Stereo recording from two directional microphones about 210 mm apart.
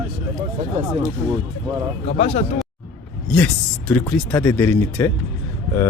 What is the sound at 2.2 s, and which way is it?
Speech, 30° left (ahead or behind).